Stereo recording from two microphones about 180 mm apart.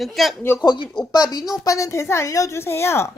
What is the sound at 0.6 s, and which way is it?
Speech, 25° left (ahead or behind).